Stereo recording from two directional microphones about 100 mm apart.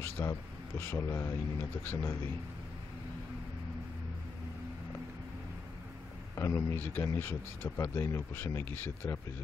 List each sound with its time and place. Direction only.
0.2 s speech: 30° left (ahead or behind)
6.3 s speech: 30° left (ahead or behind)